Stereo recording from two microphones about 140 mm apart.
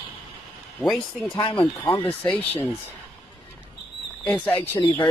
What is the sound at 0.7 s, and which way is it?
Speech, centre (ahead or behind).